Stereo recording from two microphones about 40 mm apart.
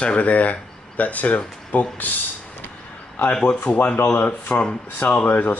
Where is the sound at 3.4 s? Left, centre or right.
Left.